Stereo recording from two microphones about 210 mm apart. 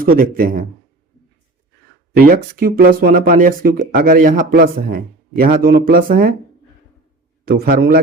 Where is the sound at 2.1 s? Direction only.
45° right (ahead or behind).